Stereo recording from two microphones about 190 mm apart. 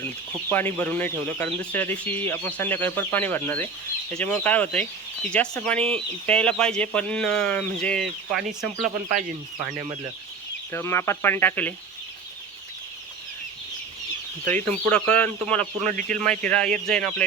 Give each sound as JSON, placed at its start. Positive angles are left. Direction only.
{"t": 0.5, "sound": "speech", "side_deg": 10}
{"t": 8.8, "sound": "speech", "side_deg": -45}
{"t": 10.7, "sound": "speech", "side_deg": 15}
{"t": 14.4, "sound": "speech", "side_deg": 10}
{"t": 15.9, "sound": "speech", "side_deg": -45}
{"t": 16.1, "sound": "speech", "side_deg": 5}